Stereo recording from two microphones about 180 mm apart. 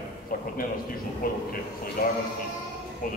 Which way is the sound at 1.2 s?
50° left (ahead or behind).